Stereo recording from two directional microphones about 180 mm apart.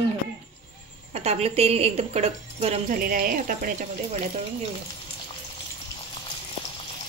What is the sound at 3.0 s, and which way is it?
Speech, 50° right (ahead or behind).